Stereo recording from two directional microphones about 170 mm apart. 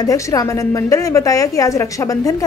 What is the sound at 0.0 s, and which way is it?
A woman's voice, 20° left (ahead or behind).